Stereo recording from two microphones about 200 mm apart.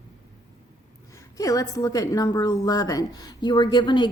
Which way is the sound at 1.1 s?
15° left (ahead or behind).